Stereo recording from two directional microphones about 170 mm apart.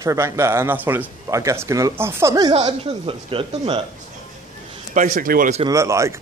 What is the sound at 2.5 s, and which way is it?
Speech, 35° right (ahead or behind).